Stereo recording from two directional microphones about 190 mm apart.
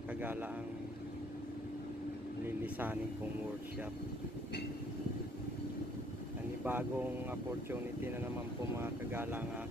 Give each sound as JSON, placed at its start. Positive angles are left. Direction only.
{"t": 0.2, "sound": "speech", "side_deg": -10}
{"t": 2.4, "sound": "speech", "side_deg": -10}
{"t": 6.6, "sound": "speech", "side_deg": -10}
{"t": 8.7, "sound": "speech", "side_deg": -10}